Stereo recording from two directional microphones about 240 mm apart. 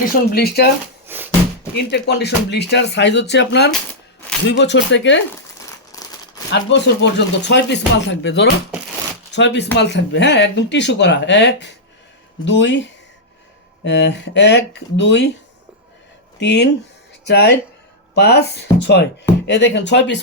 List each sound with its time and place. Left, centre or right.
0.0 s speech: left
1.0 s music: centre
1.7 s speech: left
5.9 s a sound: centre
6.5 s speech: left
13.8 s speech: left
16.4 s speech: left